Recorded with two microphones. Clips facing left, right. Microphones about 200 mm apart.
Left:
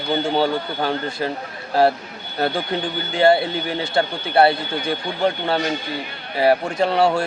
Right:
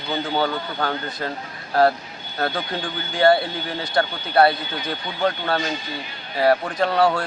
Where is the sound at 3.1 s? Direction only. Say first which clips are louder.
Left 1 dB; 25° left (ahead or behind).